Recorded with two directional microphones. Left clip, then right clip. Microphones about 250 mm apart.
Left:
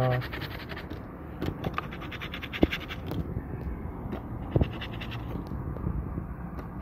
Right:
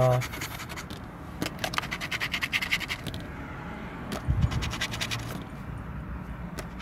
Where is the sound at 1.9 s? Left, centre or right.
Right.